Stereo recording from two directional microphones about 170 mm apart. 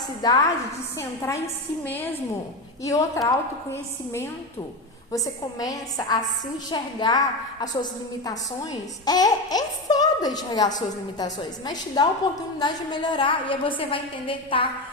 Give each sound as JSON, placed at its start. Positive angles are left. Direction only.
{"t": 0.2, "sound": "a woman's voice", "side_deg": 25}